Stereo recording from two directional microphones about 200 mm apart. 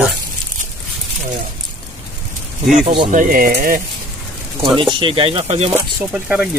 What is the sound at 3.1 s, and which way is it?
Speech, 40° right (ahead or behind).